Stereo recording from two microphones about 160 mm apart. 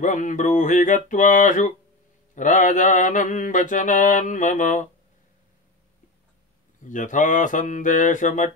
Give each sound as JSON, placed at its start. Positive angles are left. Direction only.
{"t": 0.0, "sound": "mantra", "side_deg": 55}
{"t": 6.8, "sound": "mantra", "side_deg": 55}